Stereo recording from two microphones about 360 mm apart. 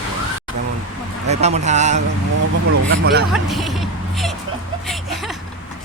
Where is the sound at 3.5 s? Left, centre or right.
Centre.